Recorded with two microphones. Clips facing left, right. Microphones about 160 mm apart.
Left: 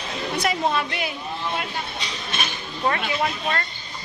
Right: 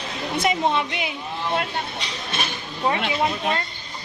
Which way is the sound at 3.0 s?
20° right (ahead or behind).